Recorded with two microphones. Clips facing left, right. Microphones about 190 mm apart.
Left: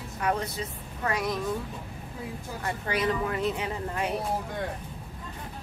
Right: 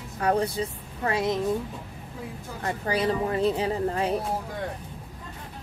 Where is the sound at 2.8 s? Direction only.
30° right (ahead or behind).